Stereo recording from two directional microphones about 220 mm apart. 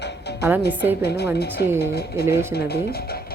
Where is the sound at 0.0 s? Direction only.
50° left (ahead or behind).